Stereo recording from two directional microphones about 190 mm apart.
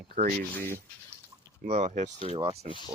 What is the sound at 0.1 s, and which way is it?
Speech, 45° right (ahead or behind).